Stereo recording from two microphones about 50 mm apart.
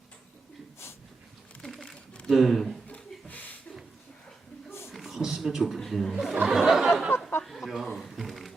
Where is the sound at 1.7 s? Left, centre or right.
Centre.